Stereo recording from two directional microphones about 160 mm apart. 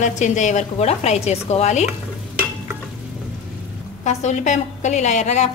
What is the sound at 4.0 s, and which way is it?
Speech, 45° left (ahead or behind).